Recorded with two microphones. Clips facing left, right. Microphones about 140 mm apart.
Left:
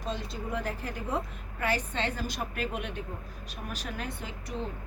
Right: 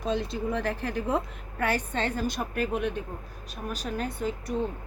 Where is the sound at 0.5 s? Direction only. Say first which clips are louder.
Right 2 dB; 70° right (ahead or behind).